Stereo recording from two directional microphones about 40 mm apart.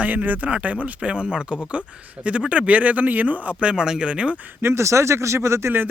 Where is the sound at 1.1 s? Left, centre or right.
Right.